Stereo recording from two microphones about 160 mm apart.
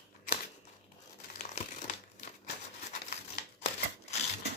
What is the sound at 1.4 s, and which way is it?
Crumpling, 50° left (ahead or behind).